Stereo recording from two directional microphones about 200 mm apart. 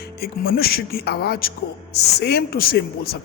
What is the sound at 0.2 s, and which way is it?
Speech, 50° left (ahead or behind).